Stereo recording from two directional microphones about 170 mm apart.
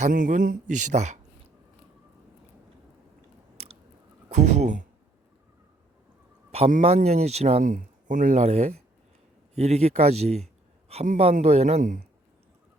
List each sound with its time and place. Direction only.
0.0 s speech: 50° right (ahead or behind)
4.3 s speech: 40° right (ahead or behind)
6.5 s a man's voice: 45° right (ahead or behind)